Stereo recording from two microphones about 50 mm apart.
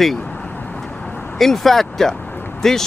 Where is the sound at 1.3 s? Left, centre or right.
Centre.